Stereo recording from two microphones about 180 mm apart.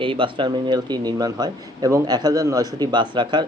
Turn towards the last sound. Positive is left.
turn(degrees=-25)  # may be behind; listen again after turning